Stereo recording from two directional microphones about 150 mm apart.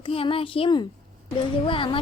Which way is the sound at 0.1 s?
40° left (ahead or behind).